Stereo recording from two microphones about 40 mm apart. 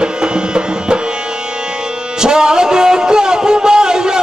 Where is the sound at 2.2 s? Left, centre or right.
Centre.